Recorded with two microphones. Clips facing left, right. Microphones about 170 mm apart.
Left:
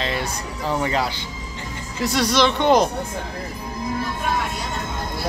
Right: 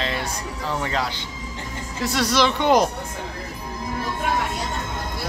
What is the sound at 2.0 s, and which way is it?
Mantra, 5° right (ahead or behind).